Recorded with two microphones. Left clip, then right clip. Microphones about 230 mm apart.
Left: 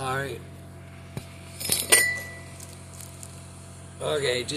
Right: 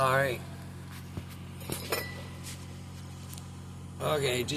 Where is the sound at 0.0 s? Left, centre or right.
Centre.